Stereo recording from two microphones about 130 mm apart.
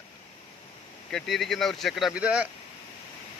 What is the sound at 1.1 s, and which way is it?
Speech, centre (ahead or behind).